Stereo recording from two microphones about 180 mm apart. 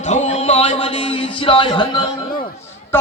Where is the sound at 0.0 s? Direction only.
40° left (ahead or behind).